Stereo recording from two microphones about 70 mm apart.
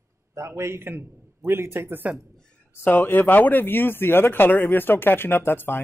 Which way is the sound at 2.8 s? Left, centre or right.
Left.